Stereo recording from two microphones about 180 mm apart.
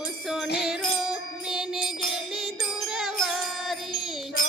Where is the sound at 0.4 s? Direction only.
65° left (ahead or behind).